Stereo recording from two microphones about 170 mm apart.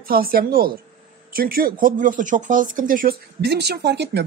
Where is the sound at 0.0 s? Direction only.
60° right (ahead or behind).